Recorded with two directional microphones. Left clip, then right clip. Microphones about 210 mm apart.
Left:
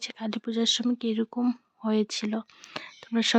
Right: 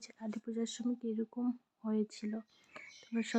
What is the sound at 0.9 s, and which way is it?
Speech, 45° left (ahead or behind).